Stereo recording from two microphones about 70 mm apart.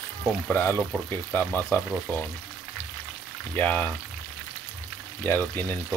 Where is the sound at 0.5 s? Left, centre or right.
Left.